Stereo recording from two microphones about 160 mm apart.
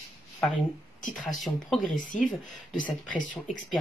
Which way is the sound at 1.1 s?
55° left (ahead or behind).